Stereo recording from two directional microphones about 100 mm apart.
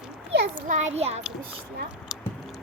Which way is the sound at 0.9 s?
90° right.